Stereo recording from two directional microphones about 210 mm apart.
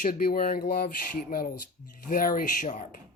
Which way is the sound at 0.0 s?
40° left (ahead or behind).